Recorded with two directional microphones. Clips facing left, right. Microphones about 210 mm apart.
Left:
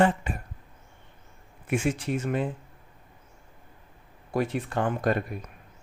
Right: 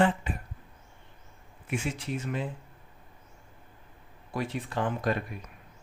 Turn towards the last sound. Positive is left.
turn(degrees=50)  # may be behind; listen again after turning